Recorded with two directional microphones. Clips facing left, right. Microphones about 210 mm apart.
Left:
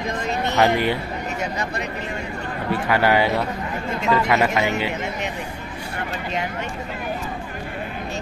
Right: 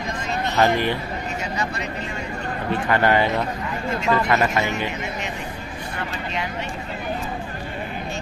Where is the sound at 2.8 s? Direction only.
10° left (ahead or behind).